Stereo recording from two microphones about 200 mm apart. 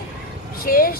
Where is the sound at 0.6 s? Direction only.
45° left (ahead or behind).